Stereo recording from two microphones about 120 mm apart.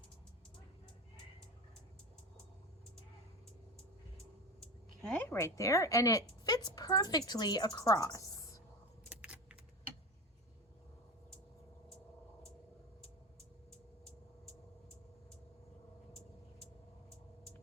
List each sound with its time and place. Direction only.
4.6 s a sound: 5° left (ahead or behind)
5.2 s a woman's voice: 25° left (ahead or behind)
9.0 s keys jangling: 10° right (ahead or behind)
13.7 s vehicle: 5° left (ahead or behind)